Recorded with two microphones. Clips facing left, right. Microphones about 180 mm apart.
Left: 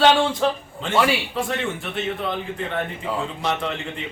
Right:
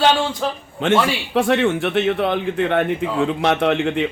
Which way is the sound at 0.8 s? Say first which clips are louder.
Right 3 dB; 80° right.